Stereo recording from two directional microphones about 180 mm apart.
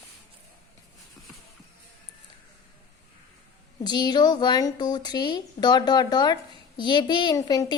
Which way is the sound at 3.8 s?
25° left (ahead or behind).